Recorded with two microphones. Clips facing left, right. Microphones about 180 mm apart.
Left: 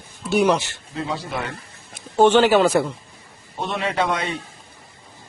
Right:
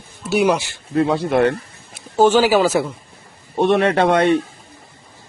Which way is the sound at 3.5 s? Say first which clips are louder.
Right 9 dB; 60° right (ahead or behind).